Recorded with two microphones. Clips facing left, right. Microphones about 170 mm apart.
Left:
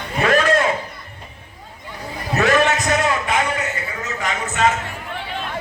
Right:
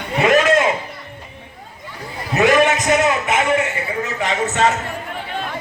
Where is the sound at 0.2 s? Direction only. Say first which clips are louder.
Right 3 dB; 15° right (ahead or behind).